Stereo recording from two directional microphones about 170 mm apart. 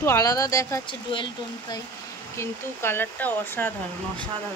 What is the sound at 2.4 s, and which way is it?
Speech, 15° left (ahead or behind).